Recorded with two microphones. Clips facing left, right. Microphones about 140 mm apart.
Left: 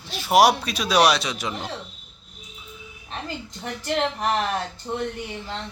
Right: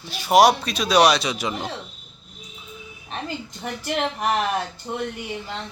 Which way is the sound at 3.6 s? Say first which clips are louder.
Left 1 dB; 15° right (ahead or behind).